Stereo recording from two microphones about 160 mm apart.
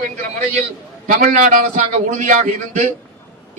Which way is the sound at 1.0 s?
60° right (ahead or behind).